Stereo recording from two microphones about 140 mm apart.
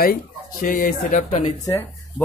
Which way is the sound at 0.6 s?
65° left (ahead or behind).